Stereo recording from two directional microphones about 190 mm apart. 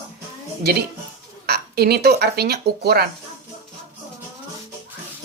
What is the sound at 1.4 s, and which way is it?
Speech, 55° right (ahead or behind).